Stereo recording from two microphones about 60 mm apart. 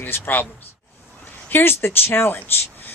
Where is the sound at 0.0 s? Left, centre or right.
Left.